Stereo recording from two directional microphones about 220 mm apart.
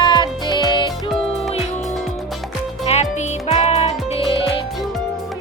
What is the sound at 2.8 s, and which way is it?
Music, 30° left (ahead or behind).